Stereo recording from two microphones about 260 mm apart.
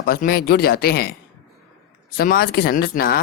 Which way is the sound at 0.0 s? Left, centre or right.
Left.